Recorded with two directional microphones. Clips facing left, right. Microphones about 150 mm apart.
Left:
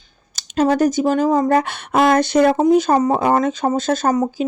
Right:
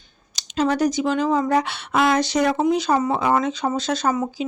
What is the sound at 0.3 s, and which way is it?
Speech, 45° left (ahead or behind).